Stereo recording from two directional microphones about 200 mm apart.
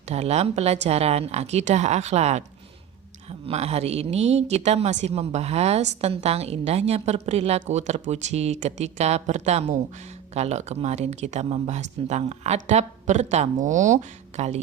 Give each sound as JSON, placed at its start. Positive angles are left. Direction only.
{"t": 0.1, "sound": "a woman's voice", "side_deg": -30}